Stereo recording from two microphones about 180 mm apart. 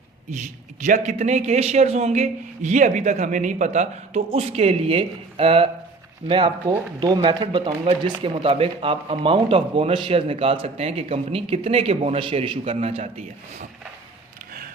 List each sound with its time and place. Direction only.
0.9 s speech: 40° right (ahead or behind)